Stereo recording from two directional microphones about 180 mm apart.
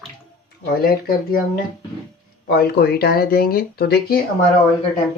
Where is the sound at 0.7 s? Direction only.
55° left (ahead or behind).